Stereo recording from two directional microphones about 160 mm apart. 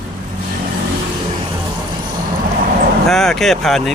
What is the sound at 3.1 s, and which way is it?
Speech, 5° left (ahead or behind).